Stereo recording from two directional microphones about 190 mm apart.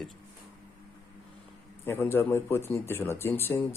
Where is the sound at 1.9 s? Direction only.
10° left (ahead or behind).